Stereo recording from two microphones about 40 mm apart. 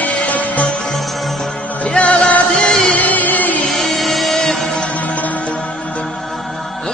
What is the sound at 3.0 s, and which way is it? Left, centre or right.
Music, left.